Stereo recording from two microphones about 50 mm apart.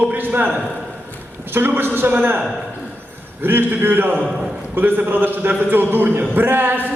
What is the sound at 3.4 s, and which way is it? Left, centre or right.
A man's voice, right.